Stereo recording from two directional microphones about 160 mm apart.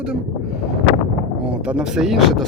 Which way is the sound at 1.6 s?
5° right (ahead or behind).